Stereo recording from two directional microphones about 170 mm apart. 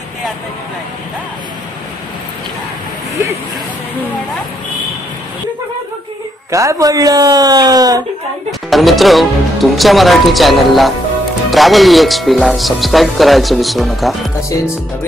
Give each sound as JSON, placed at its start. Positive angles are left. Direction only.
{"t": 6.5, "sound": "speech", "side_deg": -20}
{"t": 8.5, "sound": "speech", "side_deg": 0}